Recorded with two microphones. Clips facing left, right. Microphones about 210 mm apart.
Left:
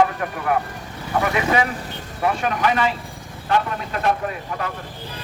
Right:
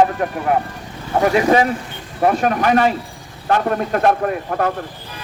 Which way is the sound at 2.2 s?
45° right (ahead or behind).